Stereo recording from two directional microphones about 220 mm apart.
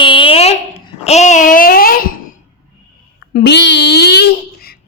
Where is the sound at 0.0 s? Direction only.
25° left (ahead or behind); by 2.4 s 40° left (ahead or behind).